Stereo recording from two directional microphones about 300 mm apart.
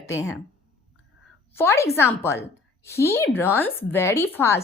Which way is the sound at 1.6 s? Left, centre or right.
Centre.